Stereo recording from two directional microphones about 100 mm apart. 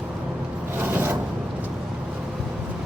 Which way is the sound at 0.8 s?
20° right (ahead or behind).